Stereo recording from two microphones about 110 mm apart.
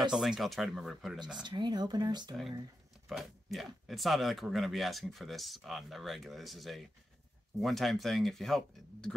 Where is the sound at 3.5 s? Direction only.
Centre (ahead or behind).